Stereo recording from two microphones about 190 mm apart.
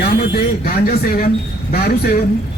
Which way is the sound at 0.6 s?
50° left (ahead or behind).